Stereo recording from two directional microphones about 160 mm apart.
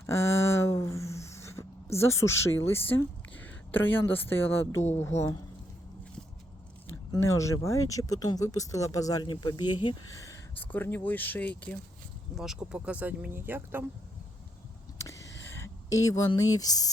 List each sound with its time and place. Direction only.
0.0 s a sound: 15° left (ahead or behind)
4.9 s speech: 15° left (ahead or behind)
7.1 s speech: 20° left (ahead or behind)
10.6 s speech: 10° left (ahead or behind)
12.3 s speech: 5° right (ahead or behind)
14.9 s a sound: 20° left (ahead or behind)